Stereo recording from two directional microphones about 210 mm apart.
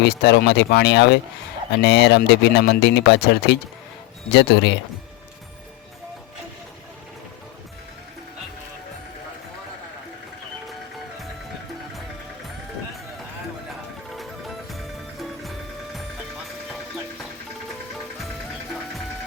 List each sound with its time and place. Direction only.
0.0 s speech: 55° left (ahead or behind)
14.2 s music: centre (ahead or behind)